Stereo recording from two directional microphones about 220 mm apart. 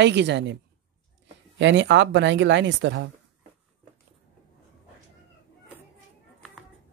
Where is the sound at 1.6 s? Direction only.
55° right (ahead or behind).